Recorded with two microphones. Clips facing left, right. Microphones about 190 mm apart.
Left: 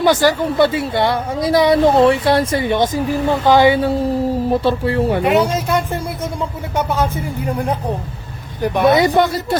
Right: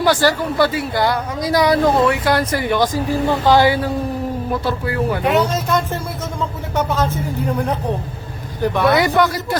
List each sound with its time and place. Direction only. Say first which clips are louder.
0.0 s speech: left 2 dB; 20° left (ahead or behind)
5.2 s speech: left 2 dB; 10° left (ahead or behind); by 9.6 s 25° left (ahead or behind)